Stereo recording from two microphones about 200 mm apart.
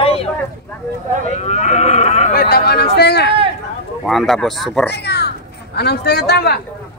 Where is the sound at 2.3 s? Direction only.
50° left (ahead or behind).